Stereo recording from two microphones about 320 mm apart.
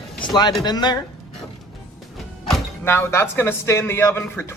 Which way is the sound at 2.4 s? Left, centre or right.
Centre.